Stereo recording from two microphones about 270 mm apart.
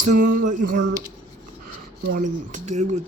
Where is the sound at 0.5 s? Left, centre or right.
Right.